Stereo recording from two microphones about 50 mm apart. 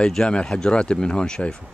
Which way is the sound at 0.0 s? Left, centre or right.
Centre.